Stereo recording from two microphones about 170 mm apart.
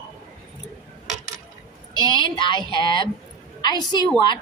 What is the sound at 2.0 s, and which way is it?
A woman's voice, 25° left (ahead or behind).